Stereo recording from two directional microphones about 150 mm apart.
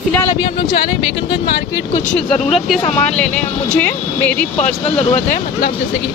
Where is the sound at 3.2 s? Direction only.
5° left (ahead or behind).